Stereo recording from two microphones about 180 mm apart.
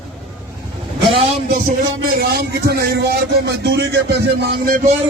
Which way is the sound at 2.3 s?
60° right (ahead or behind).